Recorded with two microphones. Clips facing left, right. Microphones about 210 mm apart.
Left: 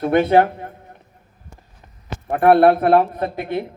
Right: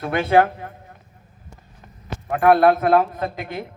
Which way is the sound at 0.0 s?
25° left (ahead or behind).